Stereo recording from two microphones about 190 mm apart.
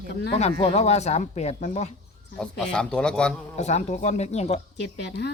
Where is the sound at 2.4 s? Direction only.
5° left (ahead or behind).